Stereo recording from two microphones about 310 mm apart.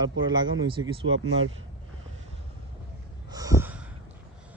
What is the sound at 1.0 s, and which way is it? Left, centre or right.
Speech, right.